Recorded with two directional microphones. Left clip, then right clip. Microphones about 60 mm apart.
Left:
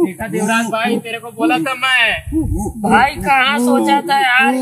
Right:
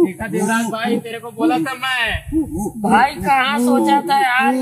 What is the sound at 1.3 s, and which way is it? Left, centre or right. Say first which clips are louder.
A man's voice: left 2 dB; centre.